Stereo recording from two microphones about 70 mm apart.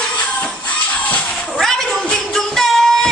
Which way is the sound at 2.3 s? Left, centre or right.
Centre.